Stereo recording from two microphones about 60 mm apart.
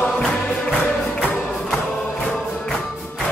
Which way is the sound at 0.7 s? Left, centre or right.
Left.